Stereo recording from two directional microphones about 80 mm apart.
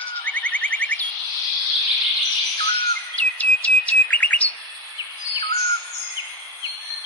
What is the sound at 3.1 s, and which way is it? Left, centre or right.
Chirp, centre.